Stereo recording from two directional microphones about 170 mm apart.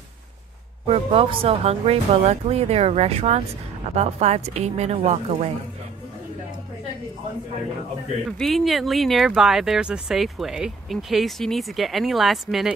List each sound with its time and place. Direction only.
0.8 s speech: 35° right (ahead or behind)
8.3 s speech: centre (ahead or behind)